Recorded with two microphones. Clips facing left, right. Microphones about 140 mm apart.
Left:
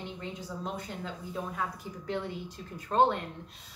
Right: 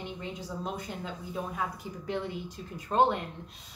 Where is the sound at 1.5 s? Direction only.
15° right (ahead or behind).